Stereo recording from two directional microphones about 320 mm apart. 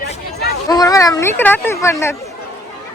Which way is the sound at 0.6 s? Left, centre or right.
Centre.